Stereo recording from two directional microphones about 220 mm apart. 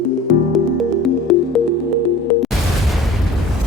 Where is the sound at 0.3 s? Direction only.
Centre (ahead or behind).